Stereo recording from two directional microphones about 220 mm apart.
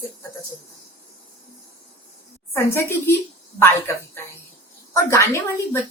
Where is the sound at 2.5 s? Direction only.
10° left (ahead or behind).